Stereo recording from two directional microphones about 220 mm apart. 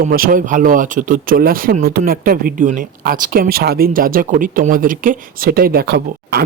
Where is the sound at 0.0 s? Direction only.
40° right (ahead or behind).